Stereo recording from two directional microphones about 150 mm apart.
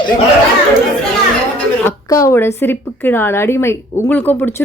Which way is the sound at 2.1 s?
20° left (ahead or behind).